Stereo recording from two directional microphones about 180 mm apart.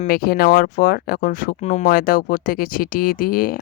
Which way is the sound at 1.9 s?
55° left (ahead or behind).